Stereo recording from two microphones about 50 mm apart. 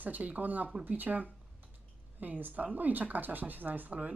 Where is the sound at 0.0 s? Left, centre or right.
Right.